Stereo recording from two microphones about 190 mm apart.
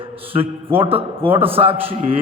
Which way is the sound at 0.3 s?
30° right (ahead or behind).